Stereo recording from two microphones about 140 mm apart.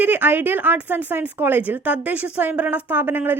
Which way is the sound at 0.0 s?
15° right (ahead or behind).